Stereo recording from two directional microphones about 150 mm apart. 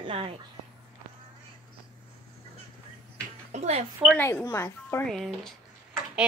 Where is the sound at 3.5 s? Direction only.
45° right (ahead or behind).